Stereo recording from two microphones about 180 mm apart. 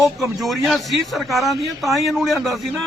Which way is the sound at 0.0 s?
Centre (ahead or behind).